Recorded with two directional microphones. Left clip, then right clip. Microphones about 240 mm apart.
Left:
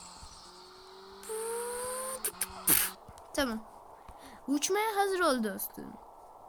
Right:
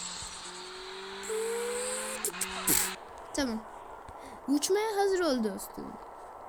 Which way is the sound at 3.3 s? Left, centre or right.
Centre.